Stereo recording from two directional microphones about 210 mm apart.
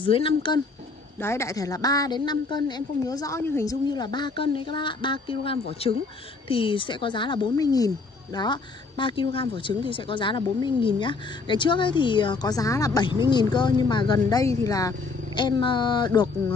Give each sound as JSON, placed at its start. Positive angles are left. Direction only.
{"t": 0.0, "sound": "a woman's voice", "side_deg": 25}
{"t": 1.2, "sound": "a woman's voice", "side_deg": 15}